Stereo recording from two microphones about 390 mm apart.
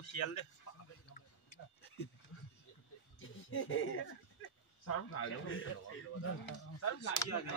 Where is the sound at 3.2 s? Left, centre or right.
Left.